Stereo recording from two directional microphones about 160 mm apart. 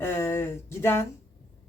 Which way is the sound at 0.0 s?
15° left (ahead or behind).